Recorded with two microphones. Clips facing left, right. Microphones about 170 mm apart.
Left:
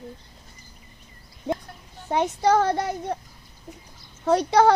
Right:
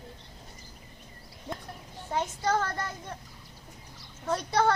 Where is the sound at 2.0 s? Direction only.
70° left (ahead or behind).